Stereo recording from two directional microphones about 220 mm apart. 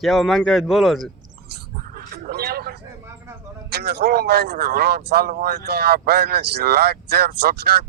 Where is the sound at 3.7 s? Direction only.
50° right (ahead or behind).